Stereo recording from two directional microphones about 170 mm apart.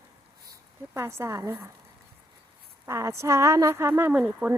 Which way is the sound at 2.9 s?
15° right (ahead or behind).